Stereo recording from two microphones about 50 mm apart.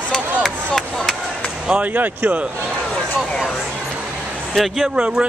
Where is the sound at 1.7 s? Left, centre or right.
Right.